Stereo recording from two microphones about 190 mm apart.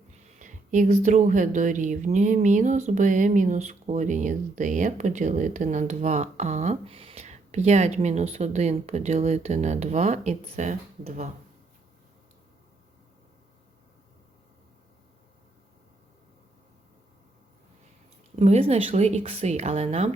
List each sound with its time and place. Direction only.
0.3 s speech: 40° right (ahead or behind)
18.3 s speech: 35° right (ahead or behind)